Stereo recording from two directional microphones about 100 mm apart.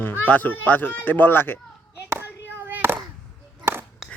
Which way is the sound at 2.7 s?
20° right (ahead or behind).